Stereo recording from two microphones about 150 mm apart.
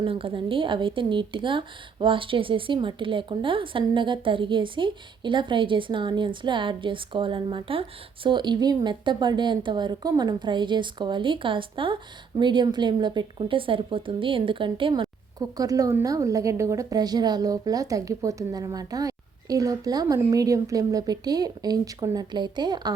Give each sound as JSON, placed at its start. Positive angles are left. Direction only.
{"t": 0.0, "sound": "a woman's voice", "side_deg": -35}